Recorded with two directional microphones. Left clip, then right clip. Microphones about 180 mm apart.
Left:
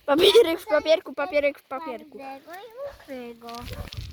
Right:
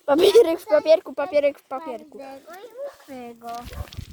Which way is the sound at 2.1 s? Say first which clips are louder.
Even; 25° left (ahead or behind).